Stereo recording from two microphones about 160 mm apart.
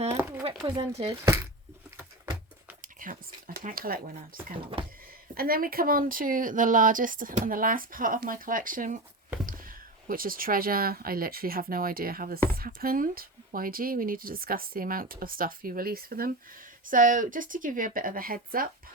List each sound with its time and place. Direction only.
0.2 s a sound: 15° right (ahead or behind)
0.6 s speech: 30° right (ahead or behind)
1.2 s speech: 15° right (ahead or behind)
2.8 s speech: 60° right (ahead or behind)